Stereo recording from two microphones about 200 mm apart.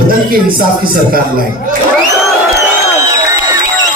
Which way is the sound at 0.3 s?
45° right (ahead or behind).